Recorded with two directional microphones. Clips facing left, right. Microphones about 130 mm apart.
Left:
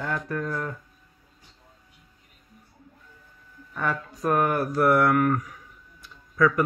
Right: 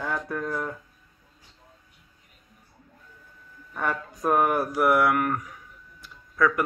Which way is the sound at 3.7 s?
15° right (ahead or behind).